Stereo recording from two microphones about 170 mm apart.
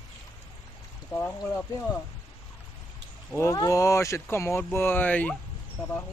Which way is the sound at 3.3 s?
20° left (ahead or behind).